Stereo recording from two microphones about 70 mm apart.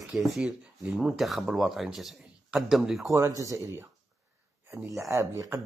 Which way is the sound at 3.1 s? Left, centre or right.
Right.